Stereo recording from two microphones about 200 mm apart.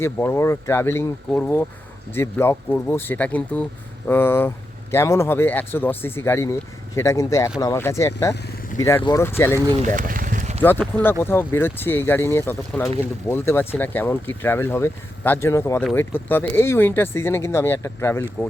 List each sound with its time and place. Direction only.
0.0 s speech: 10° left (ahead or behind)
9.9 s a sound: 45° right (ahead or behind)
10.6 s speech: 10° left (ahead or behind)